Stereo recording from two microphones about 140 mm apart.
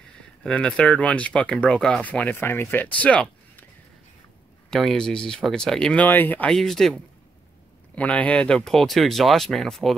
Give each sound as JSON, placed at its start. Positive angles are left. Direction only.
{"t": 0.4, "sound": "speech", "side_deg": 5}
{"t": 4.6, "sound": "speech", "side_deg": 5}